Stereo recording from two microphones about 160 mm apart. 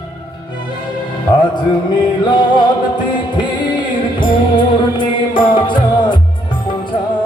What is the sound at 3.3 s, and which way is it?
Music, 30° left (ahead or behind).